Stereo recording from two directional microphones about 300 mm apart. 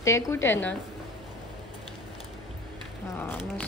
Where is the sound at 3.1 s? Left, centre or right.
Centre.